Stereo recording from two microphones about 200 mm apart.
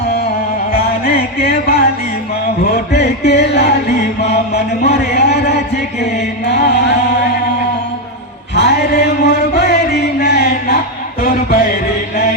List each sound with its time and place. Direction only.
0.7 s music: 50° left (ahead or behind)
2.7 s a sound: 55° left (ahead or behind)
8.5 s chant: 60° left (ahead or behind)
10.2 s music: 55° left (ahead or behind)